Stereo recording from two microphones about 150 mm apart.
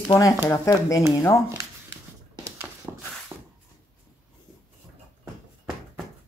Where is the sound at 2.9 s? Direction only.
20° right (ahead or behind).